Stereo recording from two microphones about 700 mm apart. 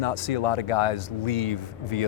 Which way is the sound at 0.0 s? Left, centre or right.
Left.